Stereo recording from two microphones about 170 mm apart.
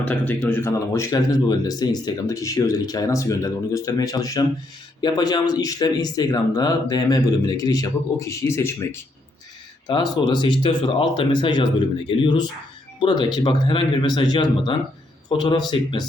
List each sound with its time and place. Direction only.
0.0 s speech: 10° left (ahead or behind)
9.8 s speech: 25° left (ahead or behind)